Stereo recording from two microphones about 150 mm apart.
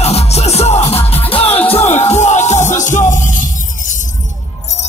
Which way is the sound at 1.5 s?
10° left (ahead or behind).